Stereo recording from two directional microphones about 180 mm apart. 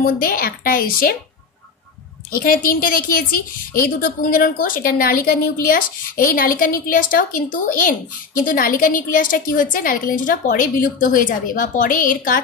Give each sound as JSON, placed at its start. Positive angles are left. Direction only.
{"t": 0.0, "sound": "a woman's voice", "side_deg": 55}
{"t": 2.4, "sound": "a woman's voice", "side_deg": 55}